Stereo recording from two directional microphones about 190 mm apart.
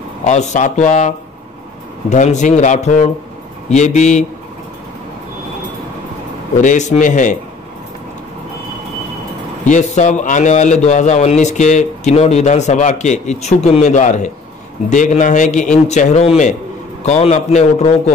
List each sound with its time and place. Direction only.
0.2 s a man's voice: 35° left (ahead or behind)
6.6 s a man's voice: 40° left (ahead or behind)
9.7 s a man's voice: 40° left (ahead or behind)